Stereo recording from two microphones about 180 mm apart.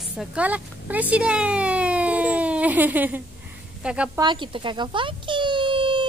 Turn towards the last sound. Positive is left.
turn(degrees=-25)  # may be behind; listen again after turning